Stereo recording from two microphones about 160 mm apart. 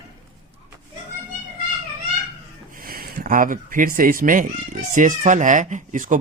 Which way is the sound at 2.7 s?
65° right (ahead or behind).